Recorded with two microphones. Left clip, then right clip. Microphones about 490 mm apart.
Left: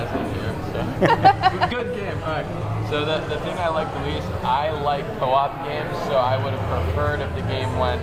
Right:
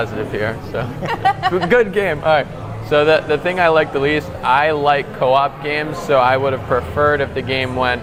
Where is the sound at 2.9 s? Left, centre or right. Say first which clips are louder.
Right 11 dB; right.